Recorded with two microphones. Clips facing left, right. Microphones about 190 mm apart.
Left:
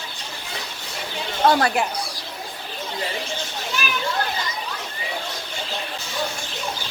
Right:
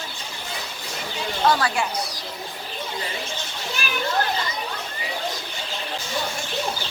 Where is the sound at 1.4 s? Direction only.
50° left (ahead or behind).